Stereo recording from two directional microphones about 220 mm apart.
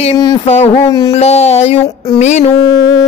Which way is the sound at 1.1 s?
30° left (ahead or behind).